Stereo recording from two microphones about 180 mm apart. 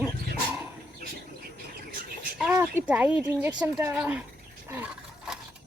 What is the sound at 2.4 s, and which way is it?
Speech, 10° right (ahead or behind).